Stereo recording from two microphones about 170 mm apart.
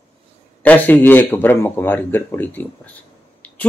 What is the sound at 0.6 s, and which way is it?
A man's voice, 10° left (ahead or behind).